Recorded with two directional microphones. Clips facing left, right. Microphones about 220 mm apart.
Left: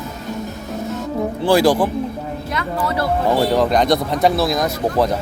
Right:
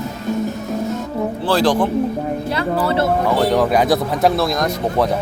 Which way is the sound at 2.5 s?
30° right (ahead or behind).